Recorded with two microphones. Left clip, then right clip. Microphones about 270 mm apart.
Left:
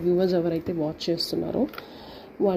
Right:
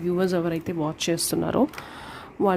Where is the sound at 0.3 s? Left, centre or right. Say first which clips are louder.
Left 1 dB; right.